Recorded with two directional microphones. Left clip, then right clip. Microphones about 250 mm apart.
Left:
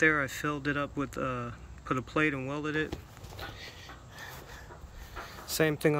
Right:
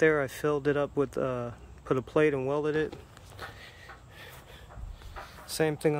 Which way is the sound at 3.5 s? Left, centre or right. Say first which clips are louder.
Left 2 dB; centre.